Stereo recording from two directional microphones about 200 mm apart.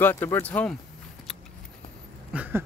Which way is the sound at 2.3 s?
10° right (ahead or behind).